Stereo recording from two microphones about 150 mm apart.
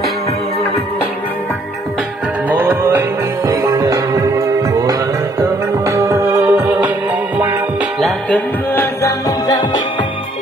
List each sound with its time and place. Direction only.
2.5 s music: 15° right (ahead or behind)
6.5 s music: 10° right (ahead or behind)
8.0 s music: 10° left (ahead or behind)
9.0 s music: 25° left (ahead or behind)